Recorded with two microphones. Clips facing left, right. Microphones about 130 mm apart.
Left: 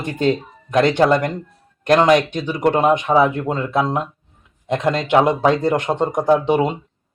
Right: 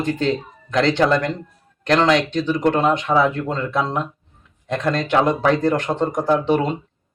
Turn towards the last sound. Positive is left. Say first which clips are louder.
# left 2 dB
turn(degrees=15)  # may be behind; listen again after turning